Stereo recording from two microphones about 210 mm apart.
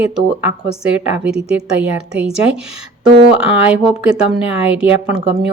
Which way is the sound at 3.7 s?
5° right (ahead or behind).